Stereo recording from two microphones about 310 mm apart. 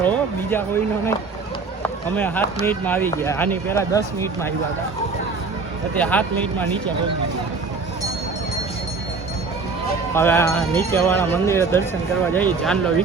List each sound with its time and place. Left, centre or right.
0.0 s a sound: centre
2.1 s speech: centre
6.0 s speech: centre
10.2 s speech: centre